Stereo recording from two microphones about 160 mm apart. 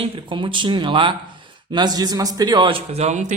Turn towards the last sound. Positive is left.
turn(degrees=-50)  # may be behind; listen again after turning